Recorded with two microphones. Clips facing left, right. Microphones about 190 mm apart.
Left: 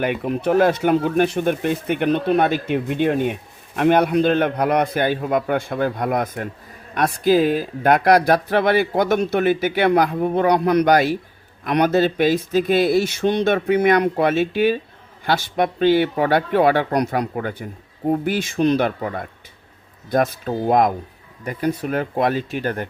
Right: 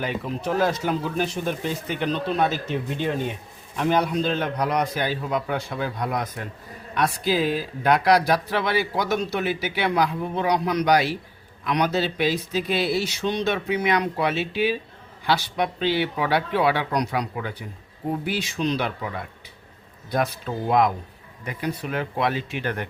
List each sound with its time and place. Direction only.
0.0 s speech: 60° left (ahead or behind); by 22.9 s 40° left (ahead or behind)